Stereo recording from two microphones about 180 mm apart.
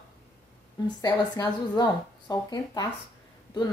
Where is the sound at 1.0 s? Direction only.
20° left (ahead or behind).